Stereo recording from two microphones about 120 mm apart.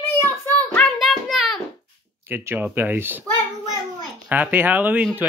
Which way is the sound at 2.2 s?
20° right (ahead or behind).